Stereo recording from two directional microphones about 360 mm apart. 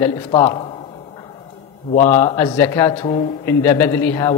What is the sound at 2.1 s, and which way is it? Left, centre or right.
Speech, centre.